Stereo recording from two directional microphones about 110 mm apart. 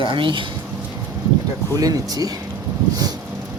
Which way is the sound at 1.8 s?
35° right (ahead or behind).